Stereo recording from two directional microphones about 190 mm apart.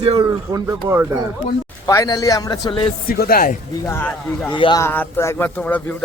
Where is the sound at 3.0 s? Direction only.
50° left (ahead or behind).